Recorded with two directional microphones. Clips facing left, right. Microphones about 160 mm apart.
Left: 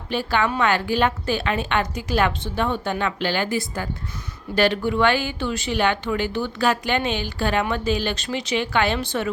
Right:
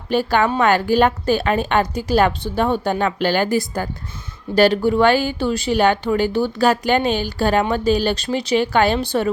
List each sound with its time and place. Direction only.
0.1 s a woman's voice: 45° right (ahead or behind)